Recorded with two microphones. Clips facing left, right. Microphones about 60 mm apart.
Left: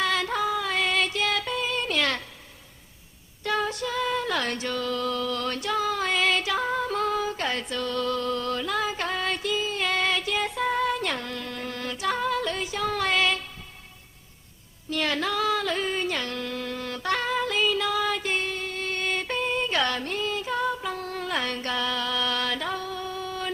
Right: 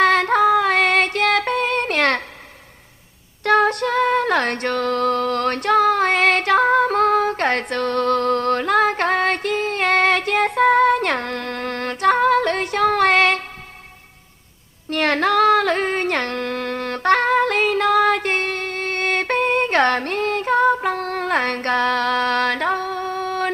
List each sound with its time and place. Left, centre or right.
0.0 s female singing: right
3.4 s female singing: right
14.8 s a sound: right